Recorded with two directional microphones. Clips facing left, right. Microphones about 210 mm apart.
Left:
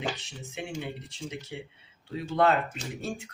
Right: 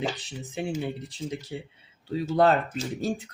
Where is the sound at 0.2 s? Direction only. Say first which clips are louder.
Right 6 dB; 35° right (ahead or behind).